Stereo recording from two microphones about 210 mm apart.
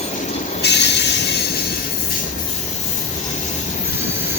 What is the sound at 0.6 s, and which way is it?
Train, 55° left (ahead or behind).